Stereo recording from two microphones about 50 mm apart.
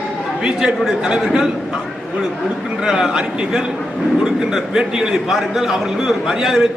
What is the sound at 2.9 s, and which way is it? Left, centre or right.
Speech, centre.